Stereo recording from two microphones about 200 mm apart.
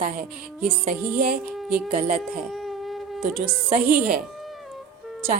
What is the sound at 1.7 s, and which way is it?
Speech, 45° right (ahead or behind).